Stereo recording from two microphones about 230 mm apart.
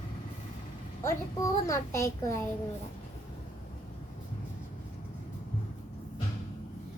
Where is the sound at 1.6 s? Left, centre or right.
Centre.